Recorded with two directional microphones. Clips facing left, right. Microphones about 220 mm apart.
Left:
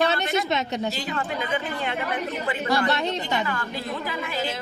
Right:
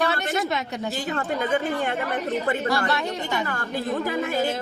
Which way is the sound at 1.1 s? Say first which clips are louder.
Right 3 dB; 45° right (ahead or behind).